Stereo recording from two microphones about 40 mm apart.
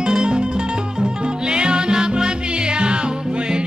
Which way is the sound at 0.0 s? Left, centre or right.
Right.